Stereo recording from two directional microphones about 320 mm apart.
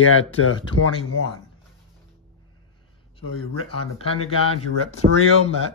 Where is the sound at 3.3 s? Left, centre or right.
Left.